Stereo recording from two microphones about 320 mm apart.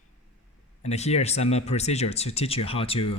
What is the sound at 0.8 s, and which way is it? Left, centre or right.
Speech, centre.